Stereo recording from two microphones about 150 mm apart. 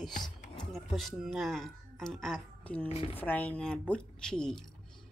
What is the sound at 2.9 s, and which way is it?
Speech, 40° left (ahead or behind).